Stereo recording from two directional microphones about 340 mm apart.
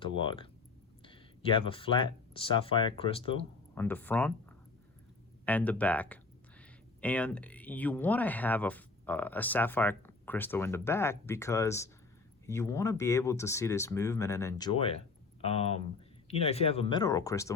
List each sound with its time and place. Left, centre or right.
0.0 s speech: centre
3.8 s speech: centre